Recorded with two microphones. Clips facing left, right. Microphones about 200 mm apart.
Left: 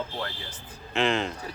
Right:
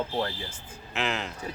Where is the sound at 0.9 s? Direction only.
5° right (ahead or behind).